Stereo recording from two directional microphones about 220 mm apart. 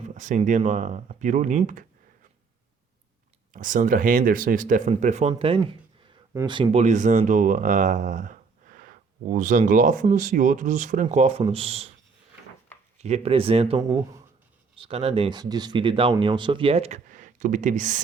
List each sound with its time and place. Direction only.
0.1 s speech: 35° right (ahead or behind)
3.5 s speech: 35° right (ahead or behind)
5.3 s speech: 20° right (ahead or behind)
13.0 s speech: 30° right (ahead or behind)
13.8 s speech: 15° right (ahead or behind)
14.8 s speech: 25° right (ahead or behind)